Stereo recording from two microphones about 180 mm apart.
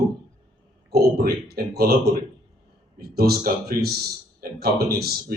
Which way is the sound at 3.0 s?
60° right (ahead or behind).